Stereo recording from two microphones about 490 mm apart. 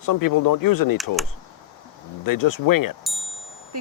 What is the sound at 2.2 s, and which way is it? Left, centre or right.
Speech, left.